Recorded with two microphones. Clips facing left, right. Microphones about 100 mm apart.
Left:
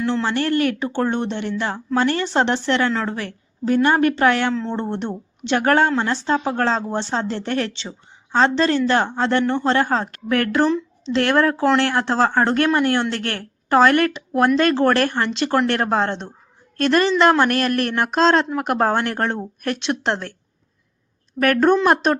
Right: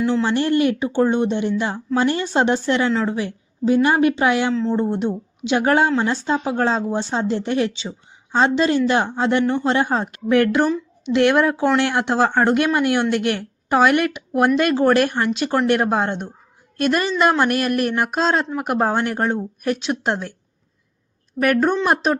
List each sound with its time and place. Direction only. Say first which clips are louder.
0.0 s speech: right 2 dB; 10° right (ahead or behind)
4.5 s speech: right 4 dB; 5° right (ahead or behind)
21.4 s speech: left 2 dB; 5° right (ahead or behind)